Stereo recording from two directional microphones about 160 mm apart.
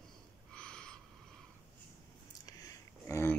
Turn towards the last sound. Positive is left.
turn(degrees=15)  # may be behind; listen again after turning